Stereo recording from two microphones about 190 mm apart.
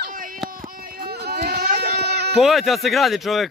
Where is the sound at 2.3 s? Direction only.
Centre (ahead or behind).